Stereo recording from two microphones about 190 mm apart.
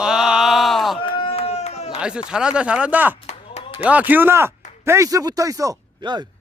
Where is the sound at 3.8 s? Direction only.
10° right (ahead or behind).